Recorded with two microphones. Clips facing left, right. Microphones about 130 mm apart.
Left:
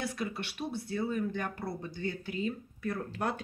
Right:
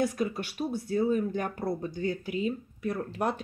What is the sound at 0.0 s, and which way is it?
Speech, 45° right (ahead or behind).